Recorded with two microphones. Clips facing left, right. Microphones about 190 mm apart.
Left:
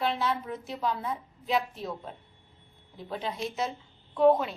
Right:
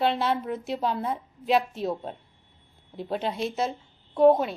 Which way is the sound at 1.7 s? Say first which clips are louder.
Right 7 dB; 30° right (ahead or behind).